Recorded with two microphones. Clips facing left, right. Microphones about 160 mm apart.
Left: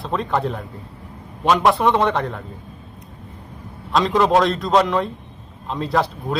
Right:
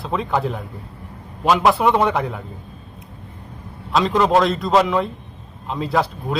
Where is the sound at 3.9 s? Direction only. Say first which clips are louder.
Even; centre (ahead or behind).